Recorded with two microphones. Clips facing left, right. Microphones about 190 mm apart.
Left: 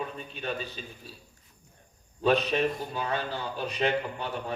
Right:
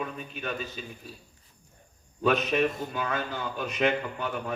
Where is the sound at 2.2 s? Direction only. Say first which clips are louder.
Even; 35° left (ahead or behind).